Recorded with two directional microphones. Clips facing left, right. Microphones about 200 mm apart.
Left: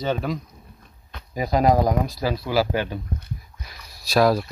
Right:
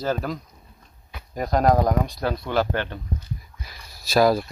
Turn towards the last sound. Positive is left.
turn(degrees=0)  # may be behind; listen again after turning